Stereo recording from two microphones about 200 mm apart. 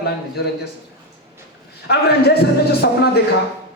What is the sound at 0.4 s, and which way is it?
Speech, 50° left (ahead or behind).